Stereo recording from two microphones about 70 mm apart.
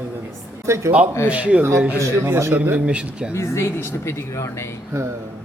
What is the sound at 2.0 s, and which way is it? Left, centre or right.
Speech, right.